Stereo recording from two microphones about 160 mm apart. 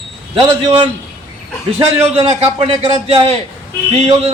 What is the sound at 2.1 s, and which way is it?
A man's voice, 40° right (ahead or behind).